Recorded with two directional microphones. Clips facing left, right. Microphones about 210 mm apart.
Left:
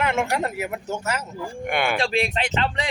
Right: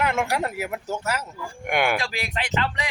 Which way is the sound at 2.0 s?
30° left (ahead or behind).